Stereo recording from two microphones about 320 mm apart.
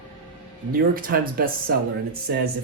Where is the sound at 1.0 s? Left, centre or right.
Right.